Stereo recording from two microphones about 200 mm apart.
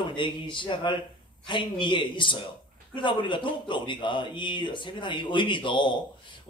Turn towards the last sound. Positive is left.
turn(degrees=25)  # may be behind; listen again after turning